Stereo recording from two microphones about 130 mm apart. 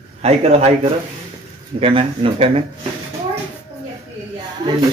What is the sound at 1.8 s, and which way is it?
Speech, 45° right (ahead or behind).